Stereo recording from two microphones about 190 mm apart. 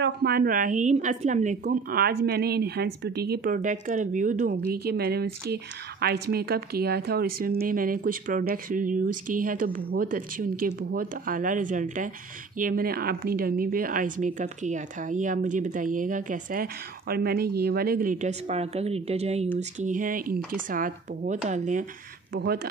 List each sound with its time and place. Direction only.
0.0 s a woman's voice: 55° right (ahead or behind)
4.6 s a woman's voice: 55° right (ahead or behind); by 19.5 s 35° right (ahead or behind)
19.8 s a woman's voice: 45° right (ahead or behind)
22.3 s speech: 55° right (ahead or behind)